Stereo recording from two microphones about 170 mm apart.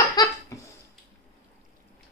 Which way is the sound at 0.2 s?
25° left (ahead or behind).